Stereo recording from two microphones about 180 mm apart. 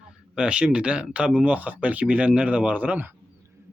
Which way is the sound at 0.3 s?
5° right (ahead or behind).